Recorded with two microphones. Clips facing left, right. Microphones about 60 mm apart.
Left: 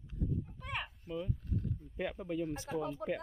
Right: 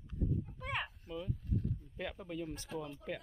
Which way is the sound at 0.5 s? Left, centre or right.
Centre.